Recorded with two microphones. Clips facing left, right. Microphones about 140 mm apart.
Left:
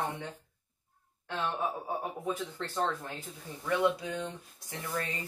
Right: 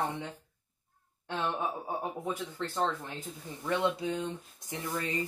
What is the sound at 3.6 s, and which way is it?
Speech, 25° right (ahead or behind).